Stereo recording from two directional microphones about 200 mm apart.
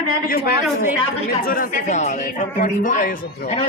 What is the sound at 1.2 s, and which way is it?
Speech, 45° left (ahead or behind).